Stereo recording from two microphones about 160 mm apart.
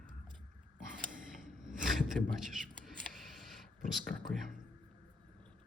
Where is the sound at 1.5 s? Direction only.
5° right (ahead or behind).